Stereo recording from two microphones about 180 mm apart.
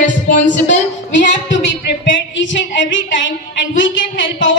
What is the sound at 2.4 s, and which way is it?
A woman's voice, 90° left.